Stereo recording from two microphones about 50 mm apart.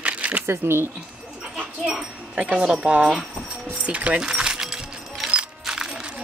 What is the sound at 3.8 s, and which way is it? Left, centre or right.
Speech, right.